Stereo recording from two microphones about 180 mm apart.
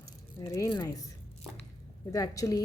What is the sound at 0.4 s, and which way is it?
Speech, 20° left (ahead or behind).